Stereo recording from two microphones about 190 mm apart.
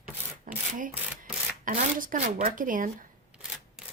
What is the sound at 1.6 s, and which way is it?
Speech, 45° right (ahead or behind).